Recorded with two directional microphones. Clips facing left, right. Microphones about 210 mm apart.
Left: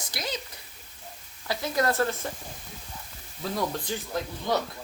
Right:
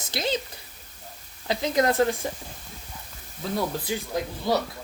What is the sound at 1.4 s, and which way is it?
Speech, 20° right (ahead or behind).